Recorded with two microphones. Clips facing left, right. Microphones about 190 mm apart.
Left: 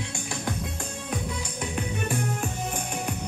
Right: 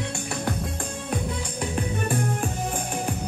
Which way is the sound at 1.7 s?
50° right (ahead or behind).